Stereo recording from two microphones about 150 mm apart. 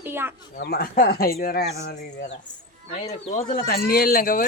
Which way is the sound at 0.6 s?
85° left.